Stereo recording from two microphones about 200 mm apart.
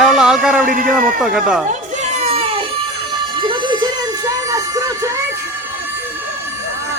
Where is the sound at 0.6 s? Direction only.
45° right (ahead or behind).